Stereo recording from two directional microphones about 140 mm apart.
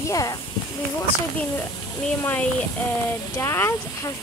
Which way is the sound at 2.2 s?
15° left (ahead or behind).